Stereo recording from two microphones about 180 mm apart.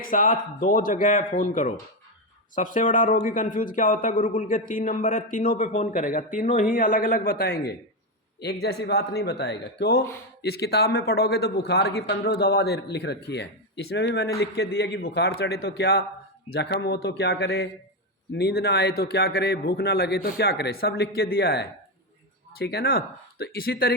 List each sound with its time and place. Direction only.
0.0 s a man's voice: 50° left (ahead or behind); by 14.3 s 75° left (ahead or behind)
14.3 s a man's voice: 60° left (ahead or behind)